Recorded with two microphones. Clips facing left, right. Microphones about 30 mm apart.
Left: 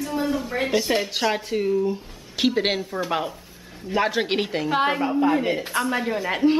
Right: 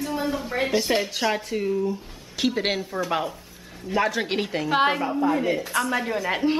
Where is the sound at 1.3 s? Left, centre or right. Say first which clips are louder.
Left 2 dB; centre.